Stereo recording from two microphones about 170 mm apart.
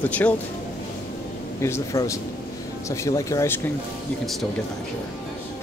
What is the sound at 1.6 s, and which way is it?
Speech, 15° left (ahead or behind).